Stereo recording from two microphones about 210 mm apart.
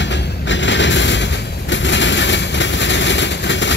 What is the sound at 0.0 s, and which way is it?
Vehicle, 60° left (ahead or behind).